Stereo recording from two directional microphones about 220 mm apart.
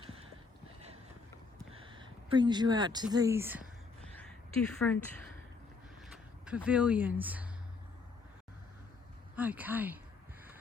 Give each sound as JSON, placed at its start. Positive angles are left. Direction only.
{"t": 1.7, "sound": "speech", "side_deg": -25}
{"t": 4.0, "sound": "a sound", "side_deg": 5}
{"t": 6.4, "sound": "speech", "side_deg": -5}
{"t": 9.3, "sound": "speech", "side_deg": -5}